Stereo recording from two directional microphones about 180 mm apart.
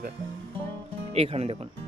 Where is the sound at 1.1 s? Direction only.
35° right (ahead or behind).